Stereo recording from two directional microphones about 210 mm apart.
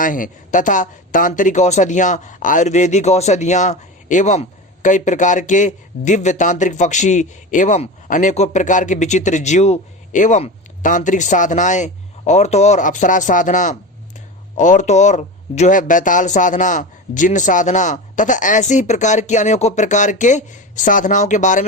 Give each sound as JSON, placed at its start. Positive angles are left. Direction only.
{"t": 0.0, "sound": "speech", "side_deg": 40}